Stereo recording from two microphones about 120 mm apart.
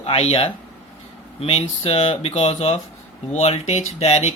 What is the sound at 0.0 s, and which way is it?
Speech, 45° left (ahead or behind).